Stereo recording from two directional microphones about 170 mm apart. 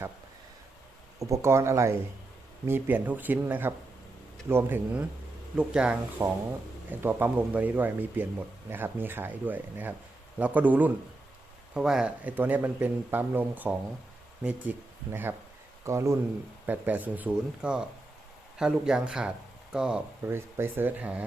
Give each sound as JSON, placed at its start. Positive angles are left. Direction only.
{"t": 1.2, "sound": "a man's voice", "side_deg": -15}